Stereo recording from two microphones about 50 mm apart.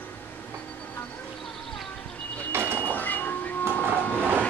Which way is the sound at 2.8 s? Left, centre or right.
Left.